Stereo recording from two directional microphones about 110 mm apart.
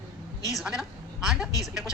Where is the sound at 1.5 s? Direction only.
30° left (ahead or behind).